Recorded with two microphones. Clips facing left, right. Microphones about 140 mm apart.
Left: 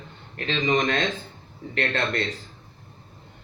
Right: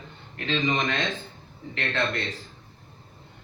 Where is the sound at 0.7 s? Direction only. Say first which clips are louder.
Left 5 dB; 40° left (ahead or behind).